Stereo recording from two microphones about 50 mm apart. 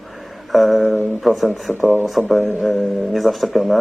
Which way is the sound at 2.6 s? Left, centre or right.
Centre.